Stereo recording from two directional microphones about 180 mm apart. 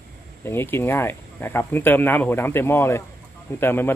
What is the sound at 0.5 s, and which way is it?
Speech, 15° left (ahead or behind).